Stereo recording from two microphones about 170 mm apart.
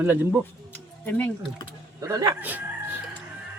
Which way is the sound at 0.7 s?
10° left (ahead or behind).